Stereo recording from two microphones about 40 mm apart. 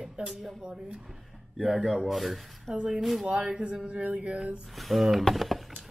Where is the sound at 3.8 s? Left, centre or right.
Right.